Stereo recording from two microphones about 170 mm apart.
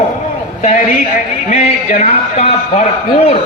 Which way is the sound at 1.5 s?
35° left (ahead or behind).